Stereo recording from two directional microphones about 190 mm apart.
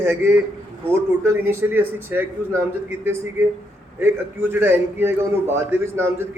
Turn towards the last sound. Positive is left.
turn(degrees=-15)  # may be behind; listen again after turning